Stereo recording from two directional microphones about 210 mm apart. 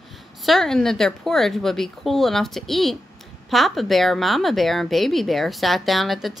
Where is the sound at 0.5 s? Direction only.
Centre (ahead or behind).